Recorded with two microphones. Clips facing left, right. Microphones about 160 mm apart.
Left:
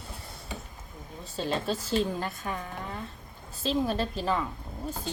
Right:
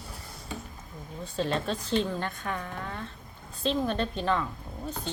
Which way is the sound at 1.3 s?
Centre (ahead or behind).